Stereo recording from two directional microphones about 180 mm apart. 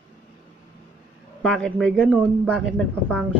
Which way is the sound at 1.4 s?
5° left (ahead or behind).